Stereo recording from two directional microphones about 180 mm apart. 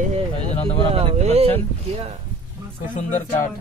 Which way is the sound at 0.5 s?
30° left (ahead or behind).